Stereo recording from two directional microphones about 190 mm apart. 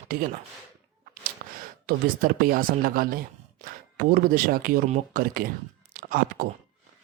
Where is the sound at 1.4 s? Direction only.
45° right (ahead or behind).